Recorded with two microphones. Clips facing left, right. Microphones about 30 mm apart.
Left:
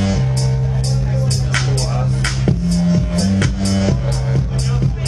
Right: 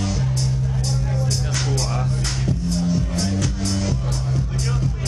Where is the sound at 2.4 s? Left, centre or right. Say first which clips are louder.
Left 6 dB; left.